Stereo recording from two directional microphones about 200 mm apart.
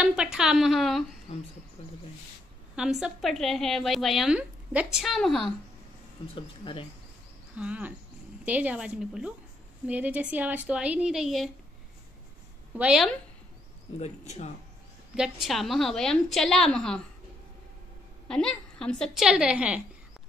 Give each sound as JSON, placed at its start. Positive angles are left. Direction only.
{"t": 0.0, "sound": "a woman's voice", "side_deg": -5}
{"t": 2.7, "sound": "a woman's voice", "side_deg": -5}
{"t": 6.3, "sound": "speech", "side_deg": 25}
{"t": 7.5, "sound": "a woman's voice", "side_deg": -5}
{"t": 12.7, "sound": "a woman's voice", "side_deg": -5}
{"t": 13.9, "sound": "speech", "side_deg": 35}
{"t": 15.1, "sound": "a woman's voice", "side_deg": 0}
{"t": 18.3, "sound": "a woman's voice", "side_deg": 5}